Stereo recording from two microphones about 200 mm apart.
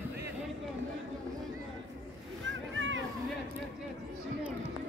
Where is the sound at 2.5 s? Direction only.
70° right (ahead or behind).